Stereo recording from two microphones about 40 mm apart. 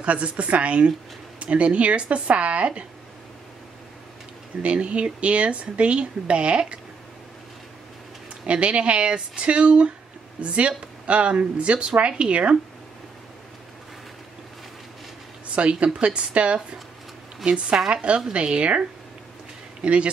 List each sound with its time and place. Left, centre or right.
0.0 s speech: right
4.6 s speech: right
8.5 s speech: right
15.5 s speech: right